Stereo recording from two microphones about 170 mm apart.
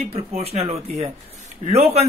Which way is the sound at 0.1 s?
35° right (ahead or behind).